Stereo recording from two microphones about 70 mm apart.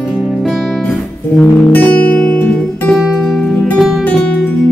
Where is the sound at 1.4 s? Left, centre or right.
Left.